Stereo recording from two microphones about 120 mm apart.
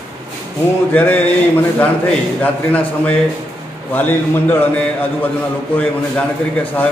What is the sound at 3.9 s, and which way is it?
A man's voice, 15° left (ahead or behind).